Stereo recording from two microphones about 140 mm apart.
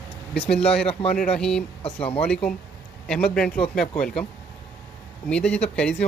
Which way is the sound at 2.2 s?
5° left (ahead or behind).